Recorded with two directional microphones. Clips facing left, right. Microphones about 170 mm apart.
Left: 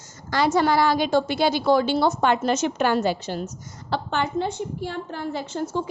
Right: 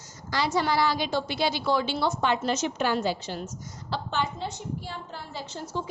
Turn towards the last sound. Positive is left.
turn(degrees=55)  # may be behind; listen again after turning